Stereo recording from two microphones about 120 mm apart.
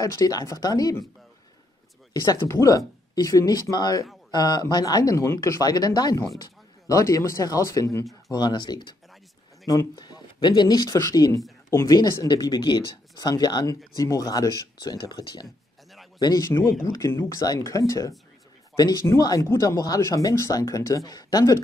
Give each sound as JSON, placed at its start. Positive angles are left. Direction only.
{"t": 0.0, "sound": "speech", "side_deg": 30}
{"t": 2.1, "sound": "speech", "side_deg": 30}
{"t": 16.4, "sound": "speech", "side_deg": 20}